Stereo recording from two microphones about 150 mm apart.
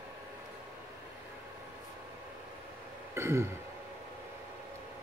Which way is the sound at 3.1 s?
15° right (ahead or behind).